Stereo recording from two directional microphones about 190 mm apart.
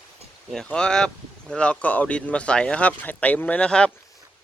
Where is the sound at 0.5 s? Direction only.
5° left (ahead or behind).